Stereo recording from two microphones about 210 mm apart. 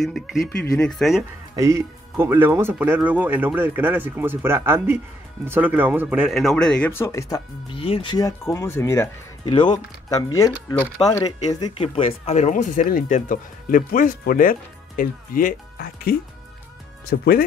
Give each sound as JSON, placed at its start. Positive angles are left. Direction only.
{"t": 0.0, "sound": "speech", "side_deg": 0}
{"t": 1.5, "sound": "speech", "side_deg": -15}